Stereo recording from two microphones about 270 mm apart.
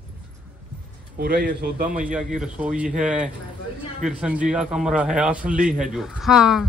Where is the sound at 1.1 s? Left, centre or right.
Right.